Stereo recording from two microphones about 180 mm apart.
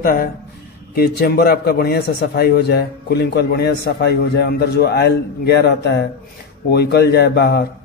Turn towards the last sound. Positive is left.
turn(degrees=65)  # may be behind; listen again after turning